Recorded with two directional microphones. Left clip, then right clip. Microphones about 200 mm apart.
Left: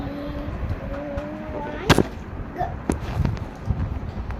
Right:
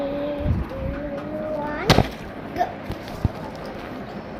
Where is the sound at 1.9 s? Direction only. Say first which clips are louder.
Even; 20° right (ahead or behind).